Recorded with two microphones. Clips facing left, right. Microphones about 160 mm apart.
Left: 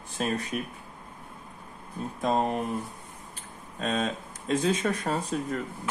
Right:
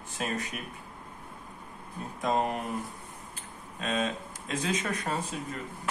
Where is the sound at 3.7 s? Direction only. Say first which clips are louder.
Left 2 dB; 35° left (ahead or behind).